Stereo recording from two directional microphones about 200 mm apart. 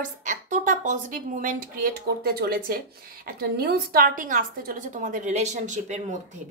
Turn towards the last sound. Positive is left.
turn(degrees=-35)  # may be behind; listen again after turning